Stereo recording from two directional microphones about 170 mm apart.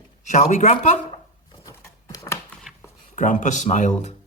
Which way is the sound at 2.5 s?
Centre (ahead or behind).